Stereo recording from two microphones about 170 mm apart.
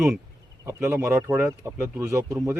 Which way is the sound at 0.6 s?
15° right (ahead or behind).